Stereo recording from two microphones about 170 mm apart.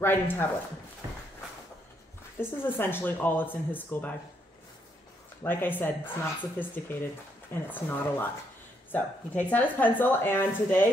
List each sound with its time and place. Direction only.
0.0 s speech: 10° left (ahead or behind)
1.0 s a sound: 20° right (ahead or behind)
2.3 s speech: 15° left (ahead or behind)
5.4 s speech: 10° left (ahead or behind)